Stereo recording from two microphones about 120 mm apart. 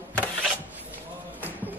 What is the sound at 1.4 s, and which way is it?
Basketball bounce, 15° right (ahead or behind).